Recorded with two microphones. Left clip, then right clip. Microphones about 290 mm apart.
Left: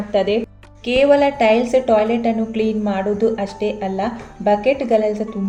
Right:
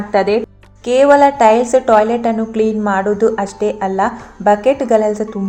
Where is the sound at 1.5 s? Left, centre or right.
Right.